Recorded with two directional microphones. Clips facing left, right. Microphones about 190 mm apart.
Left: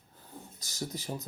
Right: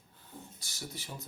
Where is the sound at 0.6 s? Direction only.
40° left (ahead or behind).